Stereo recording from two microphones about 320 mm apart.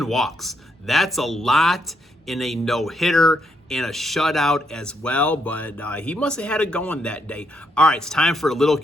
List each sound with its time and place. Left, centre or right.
0.0 s speech: centre